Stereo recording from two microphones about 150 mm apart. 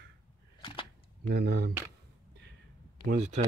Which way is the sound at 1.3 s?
90° right.